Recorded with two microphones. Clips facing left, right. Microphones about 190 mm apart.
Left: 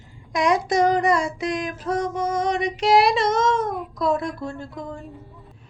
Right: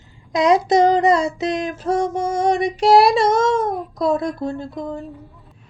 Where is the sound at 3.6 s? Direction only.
45° right (ahead or behind).